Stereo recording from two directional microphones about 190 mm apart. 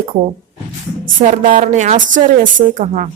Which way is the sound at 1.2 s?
45° right (ahead or behind).